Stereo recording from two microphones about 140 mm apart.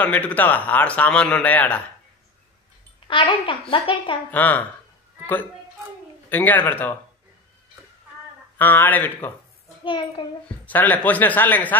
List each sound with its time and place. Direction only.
0.0 s a man's voice: 10° left (ahead or behind)
3.1 s a woman's voice: 35° left (ahead or behind)
4.3 s a man's voice: 10° left (ahead or behind)
8.5 s a man's voice: 15° left (ahead or behind)
9.8 s a woman's voice: 35° left (ahead or behind)
10.6 s a man's voice: 15° left (ahead or behind)